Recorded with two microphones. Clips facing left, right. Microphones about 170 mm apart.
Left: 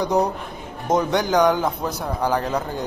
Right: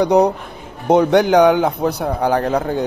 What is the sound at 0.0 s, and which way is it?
A man's voice, 65° right (ahead or behind).